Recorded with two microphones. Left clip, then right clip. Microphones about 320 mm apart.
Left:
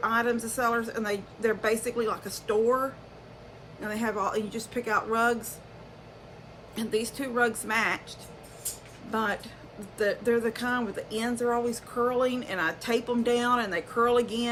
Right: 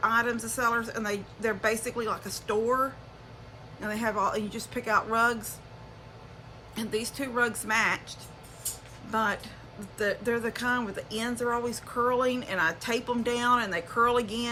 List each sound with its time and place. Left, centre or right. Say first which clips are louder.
0.0 s speech: even; centre
6.7 s speech: left 2 dB; centre
9.1 s speech: right 1 dB; centre